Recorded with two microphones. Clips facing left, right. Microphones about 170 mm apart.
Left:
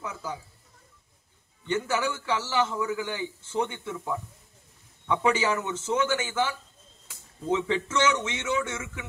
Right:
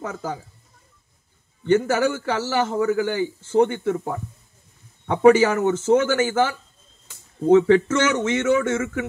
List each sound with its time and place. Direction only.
0.0 s speech: 45° right (ahead or behind)
1.6 s speech: 45° right (ahead or behind)